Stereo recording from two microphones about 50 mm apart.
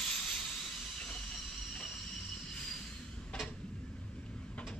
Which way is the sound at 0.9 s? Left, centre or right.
Centre.